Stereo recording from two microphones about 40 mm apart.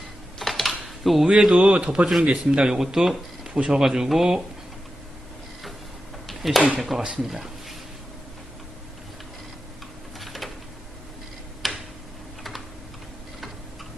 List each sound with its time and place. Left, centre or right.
0.3 s typing: centre
1.3 s a man's voice: centre
2.7 s speech: centre
6.2 s a sound: centre
6.7 s speech: centre
10.2 s a sound: centre
11.6 s tick-tock: centre
12.4 s typing: centre